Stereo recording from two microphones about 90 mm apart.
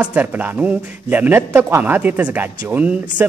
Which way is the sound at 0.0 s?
15° right (ahead or behind).